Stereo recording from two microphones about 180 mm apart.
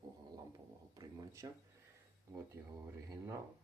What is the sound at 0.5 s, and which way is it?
Speech, 20° right (ahead or behind).